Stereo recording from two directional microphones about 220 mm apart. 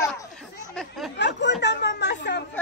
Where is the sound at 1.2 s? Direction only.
50° left (ahead or behind).